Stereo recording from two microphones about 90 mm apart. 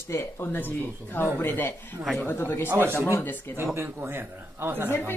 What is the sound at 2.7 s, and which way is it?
Speech, 25° right (ahead or behind).